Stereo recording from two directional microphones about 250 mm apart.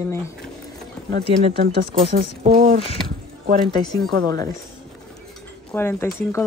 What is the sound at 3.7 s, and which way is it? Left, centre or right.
Speech, centre.